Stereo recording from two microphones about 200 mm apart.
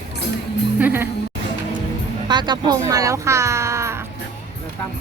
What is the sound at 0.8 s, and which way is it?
Speech, 10° right (ahead or behind).